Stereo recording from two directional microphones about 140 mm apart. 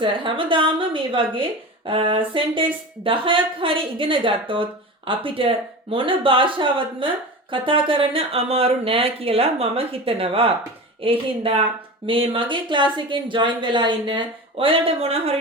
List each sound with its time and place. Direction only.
0.0 s a woman's voice: 35° right (ahead or behind)